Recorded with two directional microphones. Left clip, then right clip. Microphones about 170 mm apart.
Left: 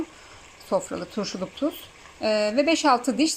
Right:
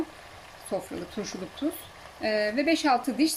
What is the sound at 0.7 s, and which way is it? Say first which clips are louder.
Speech: left 7 dB; 20° left (ahead or behind).